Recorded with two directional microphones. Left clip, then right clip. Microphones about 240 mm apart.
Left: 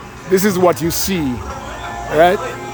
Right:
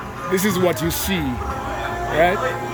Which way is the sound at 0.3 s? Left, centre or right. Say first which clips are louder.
Left 6 dB; left.